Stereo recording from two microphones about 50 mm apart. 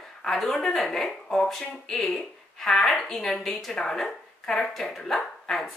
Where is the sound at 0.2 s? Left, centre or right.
Centre.